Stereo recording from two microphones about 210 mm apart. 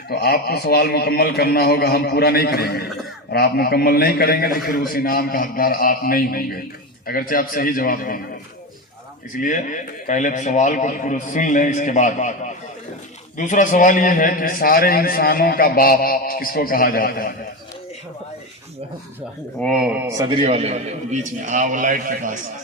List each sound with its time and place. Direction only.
0.1 s a man's voice: 50° left (ahead or behind)
9.3 s a man's voice: 40° left (ahead or behind)
13.3 s a man's voice: 35° left (ahead or behind)
19.5 s a man's voice: centre (ahead or behind); by 22.4 s 40° right (ahead or behind)